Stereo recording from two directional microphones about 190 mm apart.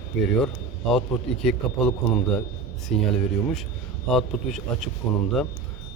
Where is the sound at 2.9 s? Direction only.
Centre (ahead or behind).